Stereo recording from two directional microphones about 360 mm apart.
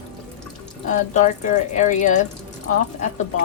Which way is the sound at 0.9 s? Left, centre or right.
Centre.